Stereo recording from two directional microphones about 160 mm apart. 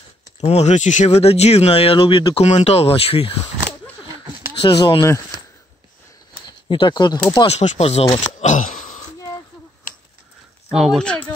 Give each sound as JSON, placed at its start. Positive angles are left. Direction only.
{"t": 0.4, "sound": "speech", "side_deg": 45}
{"t": 4.6, "sound": "speech", "side_deg": 30}
{"t": 6.4, "sound": "a sound", "side_deg": 30}
{"t": 7.4, "sound": "speech", "side_deg": 40}
{"t": 8.4, "sound": "a sound", "side_deg": 50}
{"t": 10.7, "sound": "speech", "side_deg": 0}